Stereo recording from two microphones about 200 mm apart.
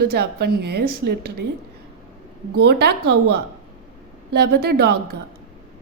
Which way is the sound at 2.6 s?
55° right (ahead or behind).